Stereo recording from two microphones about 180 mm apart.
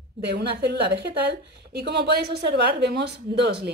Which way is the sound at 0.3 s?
65° right (ahead or behind).